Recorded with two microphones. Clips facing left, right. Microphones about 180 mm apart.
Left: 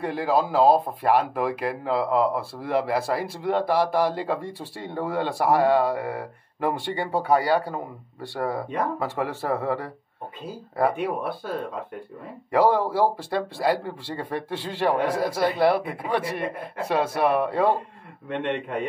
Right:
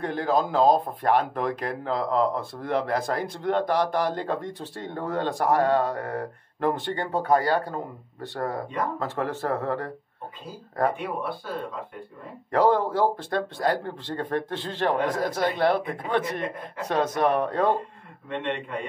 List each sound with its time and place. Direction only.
0.0 s speech: 10° left (ahead or behind)
12.4 s speech: 10° left (ahead or behind)
18.4 s a man's voice: 55° left (ahead or behind)